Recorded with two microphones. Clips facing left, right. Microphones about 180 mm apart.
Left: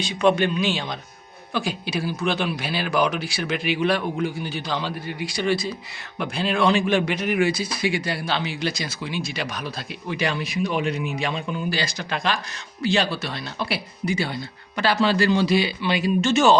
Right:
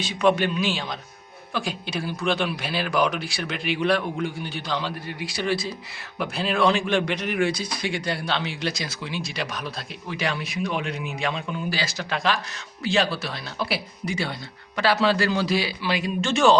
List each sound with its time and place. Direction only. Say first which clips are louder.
0.0 s speech: left 1 dB; 5° right (ahead or behind)